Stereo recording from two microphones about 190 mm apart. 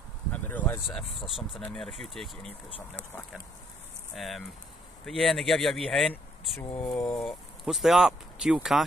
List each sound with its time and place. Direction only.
0.3 s a sound: 10° left (ahead or behind)
0.8 s speech: centre (ahead or behind)
4.1 s speech: centre (ahead or behind)
6.8 s speech: 15° left (ahead or behind)
7.2 s speech: centre (ahead or behind)